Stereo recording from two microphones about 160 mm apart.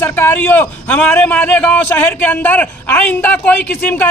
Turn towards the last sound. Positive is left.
turn(degrees=10)  # may be behind; listen again after turning